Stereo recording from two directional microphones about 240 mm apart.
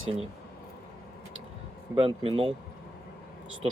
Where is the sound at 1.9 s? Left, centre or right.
Right.